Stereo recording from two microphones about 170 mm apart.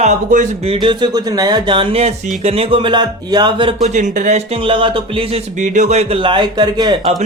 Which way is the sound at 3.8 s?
45° right (ahead or behind).